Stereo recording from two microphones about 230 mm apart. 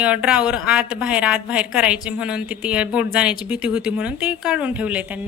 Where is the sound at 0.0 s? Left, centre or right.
Centre.